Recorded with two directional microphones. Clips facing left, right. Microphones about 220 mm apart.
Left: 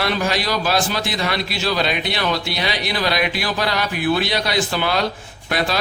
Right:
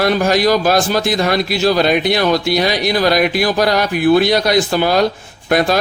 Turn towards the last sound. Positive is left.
turn(degrees=-45)  # may be behind; listen again after turning